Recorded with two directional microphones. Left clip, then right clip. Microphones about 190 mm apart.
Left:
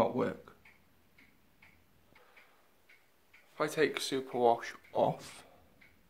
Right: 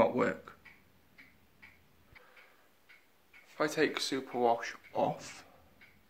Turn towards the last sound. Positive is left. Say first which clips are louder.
# left 2 dB
turn(degrees=25)  # may be behind; listen again after turning